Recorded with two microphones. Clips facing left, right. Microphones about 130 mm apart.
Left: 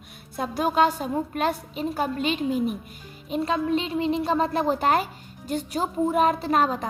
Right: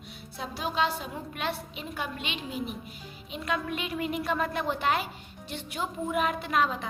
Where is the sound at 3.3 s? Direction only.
30° left (ahead or behind).